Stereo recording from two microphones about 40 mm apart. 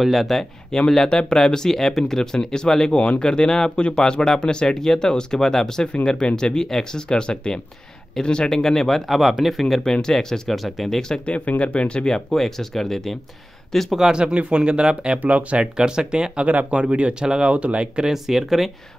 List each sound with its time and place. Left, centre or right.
0.0 s speech: centre
0.7 s speech: centre
10.0 s speech: centre
11.2 s speech: left
12.1 s speech: centre
13.8 s speech: centre
14.2 s speech: right
15.2 s speech: right
15.6 s speech: right
16.4 s speech: right
18.0 s speech: centre